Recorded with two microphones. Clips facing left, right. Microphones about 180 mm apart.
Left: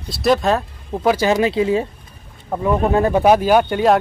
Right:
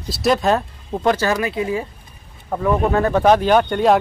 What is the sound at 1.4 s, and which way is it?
Speech, 25° left (ahead or behind).